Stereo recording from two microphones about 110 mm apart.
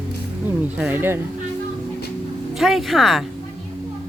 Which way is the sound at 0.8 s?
20° right (ahead or behind).